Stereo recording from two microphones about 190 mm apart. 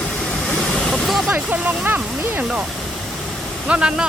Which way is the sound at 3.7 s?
5° right (ahead or behind).